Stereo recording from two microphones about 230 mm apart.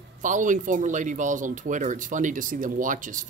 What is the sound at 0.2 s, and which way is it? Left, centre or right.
Speech, right.